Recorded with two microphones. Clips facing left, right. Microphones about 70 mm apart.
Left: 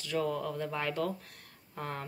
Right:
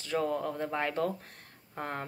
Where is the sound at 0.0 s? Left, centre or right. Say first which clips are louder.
Right 2 dB; right.